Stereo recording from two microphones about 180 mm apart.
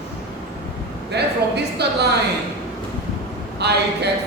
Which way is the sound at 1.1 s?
65° right (ahead or behind).